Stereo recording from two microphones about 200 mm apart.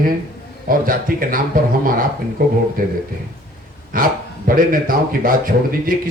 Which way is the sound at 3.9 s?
45° right (ahead or behind).